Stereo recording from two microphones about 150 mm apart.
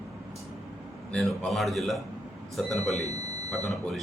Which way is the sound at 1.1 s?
5° left (ahead or behind).